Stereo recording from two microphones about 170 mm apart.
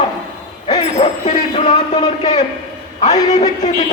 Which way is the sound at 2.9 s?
45° left (ahead or behind).